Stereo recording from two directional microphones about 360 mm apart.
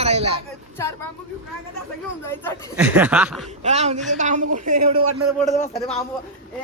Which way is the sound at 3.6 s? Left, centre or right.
Centre.